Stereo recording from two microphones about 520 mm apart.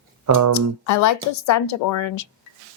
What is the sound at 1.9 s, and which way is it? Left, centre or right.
Speech, left.